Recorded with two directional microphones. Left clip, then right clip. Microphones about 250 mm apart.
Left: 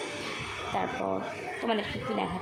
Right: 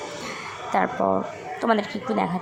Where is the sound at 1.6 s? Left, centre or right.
Right.